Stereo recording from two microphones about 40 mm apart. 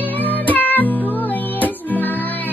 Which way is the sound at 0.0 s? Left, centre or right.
Left.